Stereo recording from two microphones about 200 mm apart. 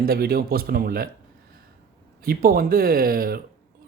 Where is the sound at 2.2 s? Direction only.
45° right (ahead or behind).